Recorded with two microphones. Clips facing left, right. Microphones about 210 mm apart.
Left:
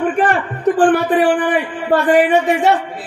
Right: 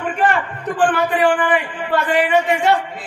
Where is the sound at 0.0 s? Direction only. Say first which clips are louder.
Left 3 dB; 45° left (ahead or behind).